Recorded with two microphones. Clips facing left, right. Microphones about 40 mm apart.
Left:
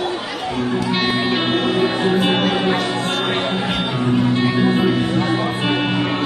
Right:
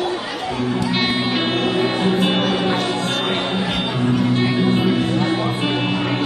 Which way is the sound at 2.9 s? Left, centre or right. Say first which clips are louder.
Left 1 dB; left.